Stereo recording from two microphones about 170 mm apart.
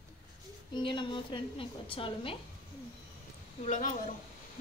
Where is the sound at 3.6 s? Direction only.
45° left (ahead or behind).